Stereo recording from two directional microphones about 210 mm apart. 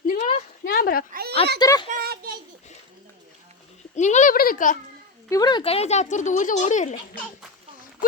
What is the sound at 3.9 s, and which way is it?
Speech, 35° left (ahead or behind).